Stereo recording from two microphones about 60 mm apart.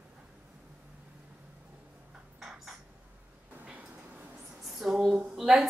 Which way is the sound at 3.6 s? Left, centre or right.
Right.